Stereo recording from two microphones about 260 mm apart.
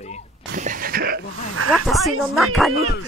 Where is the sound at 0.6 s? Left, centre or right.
Right.